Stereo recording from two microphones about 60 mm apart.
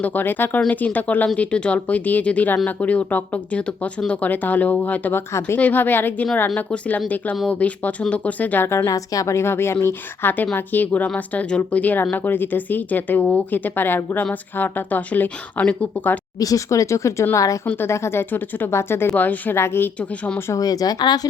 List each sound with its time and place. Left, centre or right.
0.0 s speech: left
8.6 s speech: left
8.9 s speech: left
16.4 s speech: left
17.3 s a woman's voice: left
17.8 s speech: left
19.1 s speech: left
19.5 s speech: left
20.0 s speech: centre
20.5 s speech: left